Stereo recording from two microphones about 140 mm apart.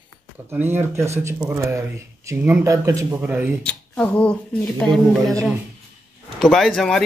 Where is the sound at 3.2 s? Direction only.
10° right (ahead or behind).